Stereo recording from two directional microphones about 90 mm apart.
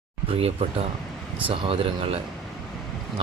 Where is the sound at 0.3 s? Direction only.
90° right.